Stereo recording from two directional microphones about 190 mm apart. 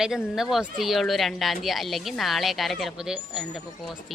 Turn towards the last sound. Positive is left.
turn(degrees=0)  # may be behind; listen again after turning